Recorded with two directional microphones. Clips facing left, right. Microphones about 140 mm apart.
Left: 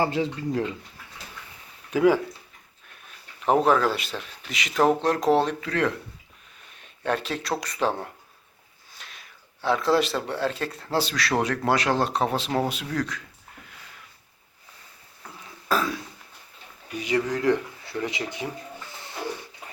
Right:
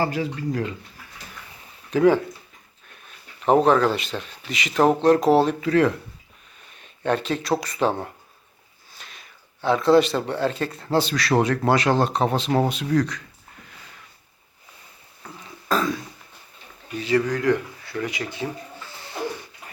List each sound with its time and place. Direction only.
0.0 s speech: 25° left (ahead or behind)
1.9 s speech: 10° left (ahead or behind)
3.4 s speech: centre (ahead or behind)
15.7 s throat clearing: 5° left (ahead or behind)
16.9 s speech: 15° left (ahead or behind)